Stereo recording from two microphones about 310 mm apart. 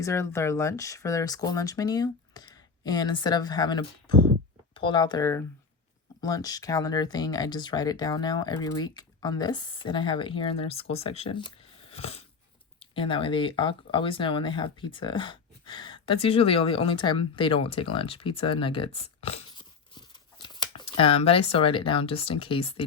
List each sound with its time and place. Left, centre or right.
0.0 s speech: centre